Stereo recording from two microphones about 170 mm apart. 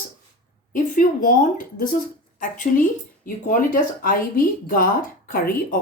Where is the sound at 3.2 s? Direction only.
55° left (ahead or behind).